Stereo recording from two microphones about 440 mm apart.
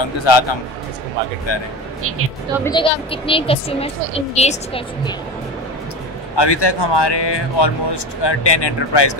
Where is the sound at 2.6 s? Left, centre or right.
Centre.